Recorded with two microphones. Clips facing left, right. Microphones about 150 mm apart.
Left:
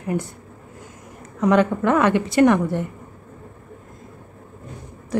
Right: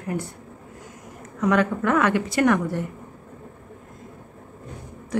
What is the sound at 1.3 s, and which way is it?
A woman's voice, 25° left (ahead or behind).